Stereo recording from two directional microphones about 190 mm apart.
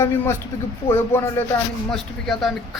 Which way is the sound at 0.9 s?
15° left (ahead or behind).